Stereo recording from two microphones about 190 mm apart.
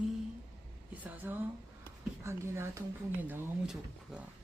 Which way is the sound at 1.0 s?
10° right (ahead or behind).